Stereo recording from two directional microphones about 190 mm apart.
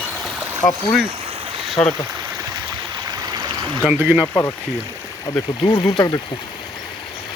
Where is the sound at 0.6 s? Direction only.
15° left (ahead or behind).